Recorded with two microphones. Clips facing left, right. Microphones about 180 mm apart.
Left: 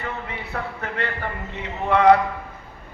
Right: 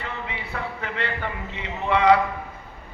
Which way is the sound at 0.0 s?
50° left (ahead or behind).